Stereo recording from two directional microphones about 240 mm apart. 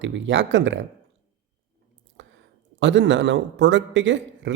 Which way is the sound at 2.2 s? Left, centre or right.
Right.